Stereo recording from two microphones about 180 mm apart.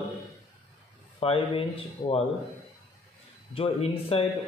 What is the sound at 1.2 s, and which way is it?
A man's voice, 30° left (ahead or behind).